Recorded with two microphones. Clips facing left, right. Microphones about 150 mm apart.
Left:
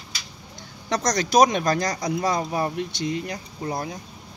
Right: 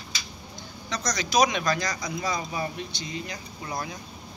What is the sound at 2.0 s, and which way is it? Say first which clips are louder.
Speech: left 6 dB; 65° left (ahead or behind).